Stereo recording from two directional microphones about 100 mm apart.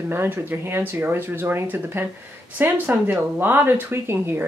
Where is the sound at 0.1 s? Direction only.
25° right (ahead or behind).